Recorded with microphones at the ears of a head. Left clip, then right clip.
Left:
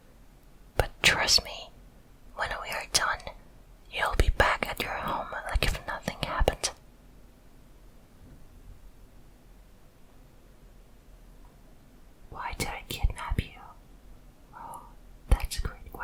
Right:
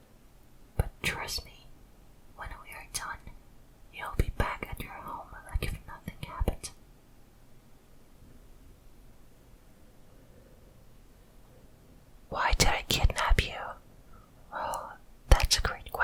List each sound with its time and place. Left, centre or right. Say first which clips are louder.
0.8 s whispering: left 10 dB; left
12.3 s whispering: right 8 dB; right